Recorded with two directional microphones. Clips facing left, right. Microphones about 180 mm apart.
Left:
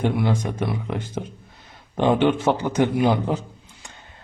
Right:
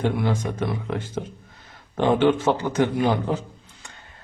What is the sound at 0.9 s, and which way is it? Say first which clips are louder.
Speech: even; 15° left (ahead or behind).